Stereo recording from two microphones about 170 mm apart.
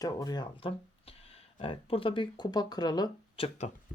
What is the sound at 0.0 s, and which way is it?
Speech, 20° left (ahead or behind).